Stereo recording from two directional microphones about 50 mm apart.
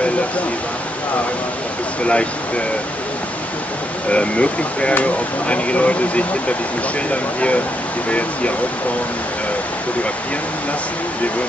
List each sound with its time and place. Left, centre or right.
2.0 s speech: left
4.1 s speech: left